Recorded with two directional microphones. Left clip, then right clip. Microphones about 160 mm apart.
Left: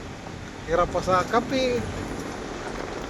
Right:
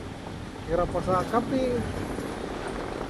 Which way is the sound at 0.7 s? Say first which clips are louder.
Left 4 dB; 65° left (ahead or behind).